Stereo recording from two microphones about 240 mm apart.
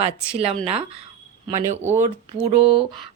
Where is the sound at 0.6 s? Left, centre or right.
Right.